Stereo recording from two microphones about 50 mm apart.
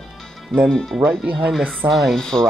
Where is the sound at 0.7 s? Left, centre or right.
Centre.